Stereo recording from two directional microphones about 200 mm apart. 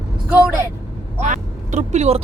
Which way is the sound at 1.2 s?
40° right (ahead or behind).